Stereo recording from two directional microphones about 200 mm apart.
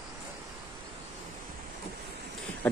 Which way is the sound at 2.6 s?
10° left (ahead or behind).